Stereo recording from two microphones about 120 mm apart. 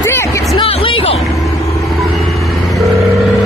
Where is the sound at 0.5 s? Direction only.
50° left (ahead or behind).